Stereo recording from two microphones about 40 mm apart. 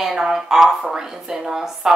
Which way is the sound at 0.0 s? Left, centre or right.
Centre.